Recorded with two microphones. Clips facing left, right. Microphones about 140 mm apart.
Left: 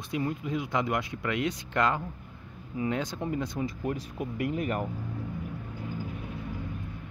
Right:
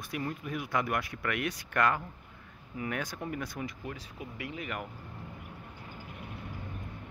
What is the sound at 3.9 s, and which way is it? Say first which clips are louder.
Speech: left 9 dB; 50° left (ahead or behind).